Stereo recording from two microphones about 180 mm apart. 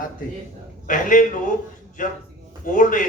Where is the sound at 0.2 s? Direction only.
50° left (ahead or behind).